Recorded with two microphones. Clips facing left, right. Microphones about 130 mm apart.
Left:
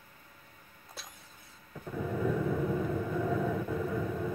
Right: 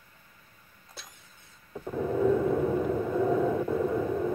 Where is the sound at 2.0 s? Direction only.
30° right (ahead or behind).